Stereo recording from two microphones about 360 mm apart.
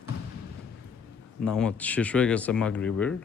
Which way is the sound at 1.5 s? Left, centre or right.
Centre.